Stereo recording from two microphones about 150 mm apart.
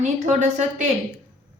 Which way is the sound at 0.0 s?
50° right (ahead or behind).